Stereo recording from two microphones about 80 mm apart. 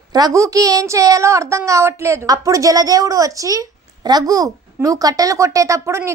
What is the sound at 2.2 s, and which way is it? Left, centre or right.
A child's voice, right.